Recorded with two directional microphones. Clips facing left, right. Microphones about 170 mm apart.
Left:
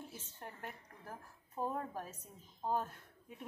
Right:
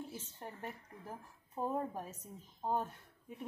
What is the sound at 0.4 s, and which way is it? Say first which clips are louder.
A woman's voice: right 1 dB; 15° right (ahead or behind).